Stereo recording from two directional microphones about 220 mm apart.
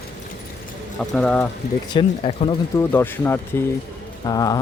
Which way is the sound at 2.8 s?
10° left (ahead or behind).